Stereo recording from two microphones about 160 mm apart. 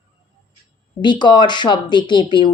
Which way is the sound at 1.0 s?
30° left (ahead or behind).